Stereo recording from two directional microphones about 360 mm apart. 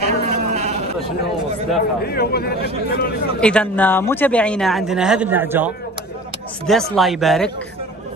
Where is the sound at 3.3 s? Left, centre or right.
Centre.